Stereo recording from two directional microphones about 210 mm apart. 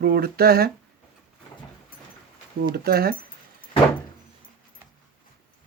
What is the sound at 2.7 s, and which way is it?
Speech, 45° right (ahead or behind).